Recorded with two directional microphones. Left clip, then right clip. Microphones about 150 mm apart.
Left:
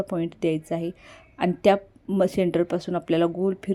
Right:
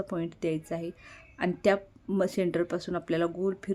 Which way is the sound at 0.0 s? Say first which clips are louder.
Left 6 dB; 20° left (ahead or behind).